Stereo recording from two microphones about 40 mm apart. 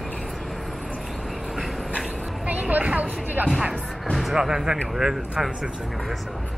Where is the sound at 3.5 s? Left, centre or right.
Centre.